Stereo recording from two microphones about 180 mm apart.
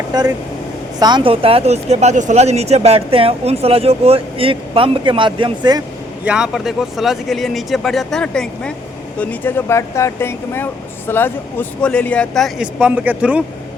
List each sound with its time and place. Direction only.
0.1 s speech: 20° right (ahead or behind)
6.2 s speech: 5° right (ahead or behind)